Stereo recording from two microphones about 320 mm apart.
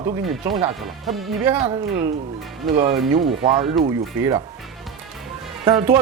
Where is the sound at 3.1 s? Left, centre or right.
Centre.